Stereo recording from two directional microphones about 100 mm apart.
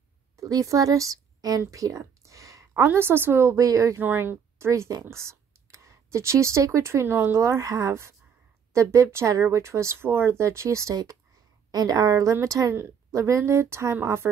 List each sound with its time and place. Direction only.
0.4 s a woman's voice: 35° right (ahead or behind)
4.0 s a woman's voice: 20° right (ahead or behind)